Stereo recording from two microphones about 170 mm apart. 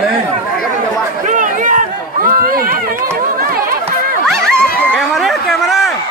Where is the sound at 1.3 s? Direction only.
50° right (ahead or behind).